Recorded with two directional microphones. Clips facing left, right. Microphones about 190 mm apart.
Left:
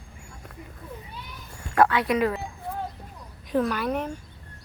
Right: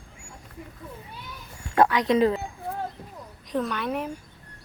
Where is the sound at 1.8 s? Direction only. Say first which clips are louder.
Right 1 dB; 20° right (ahead or behind).